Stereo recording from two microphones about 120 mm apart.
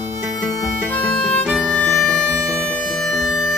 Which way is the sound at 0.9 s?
10° left (ahead or behind).